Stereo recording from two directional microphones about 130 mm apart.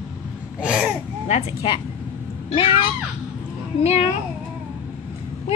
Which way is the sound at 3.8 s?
55° left (ahead or behind).